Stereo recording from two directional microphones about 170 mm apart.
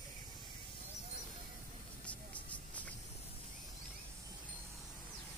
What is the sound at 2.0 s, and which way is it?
Vehicle, 10° left (ahead or behind).